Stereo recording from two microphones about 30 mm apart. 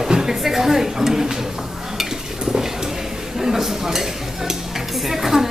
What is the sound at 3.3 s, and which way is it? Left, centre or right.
Speech, centre.